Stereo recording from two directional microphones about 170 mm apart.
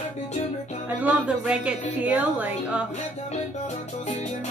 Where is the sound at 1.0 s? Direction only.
10° right (ahead or behind).